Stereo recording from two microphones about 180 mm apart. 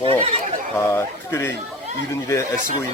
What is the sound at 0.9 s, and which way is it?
Speech, 15° left (ahead or behind).